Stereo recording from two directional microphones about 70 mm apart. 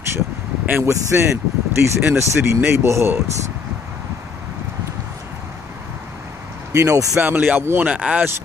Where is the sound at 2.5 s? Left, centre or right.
Right.